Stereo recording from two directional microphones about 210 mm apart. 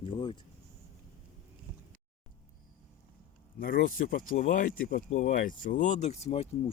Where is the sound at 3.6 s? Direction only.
40° left (ahead or behind).